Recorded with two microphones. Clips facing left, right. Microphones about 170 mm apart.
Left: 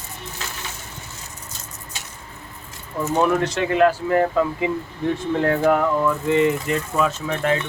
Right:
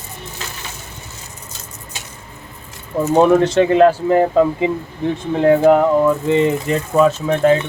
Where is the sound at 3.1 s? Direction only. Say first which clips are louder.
Right 8 dB; 30° right (ahead or behind).